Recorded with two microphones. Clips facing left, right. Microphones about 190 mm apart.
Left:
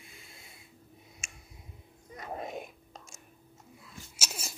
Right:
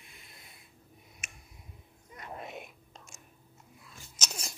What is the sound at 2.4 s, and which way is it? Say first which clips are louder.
Whispering: left 5 dB; 40° left (ahead or behind).